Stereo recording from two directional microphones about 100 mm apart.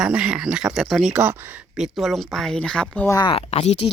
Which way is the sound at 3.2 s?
75° left (ahead or behind).